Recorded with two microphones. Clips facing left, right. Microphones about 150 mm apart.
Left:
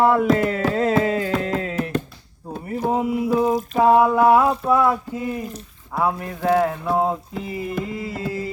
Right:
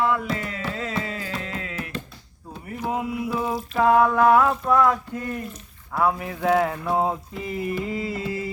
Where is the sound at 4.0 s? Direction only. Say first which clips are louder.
Left 2 dB; 10° left (ahead or behind).